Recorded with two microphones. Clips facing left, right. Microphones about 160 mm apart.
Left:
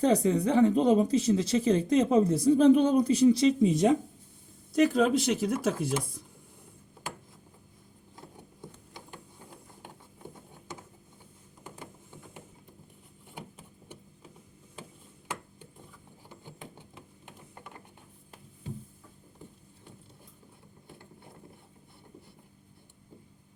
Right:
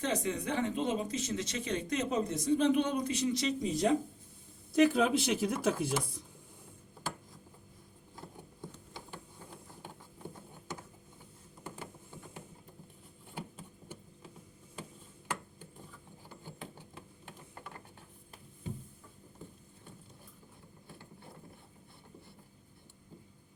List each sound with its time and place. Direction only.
0.0 s speech: 35° left (ahead or behind)
4.7 s speech: centre (ahead or behind)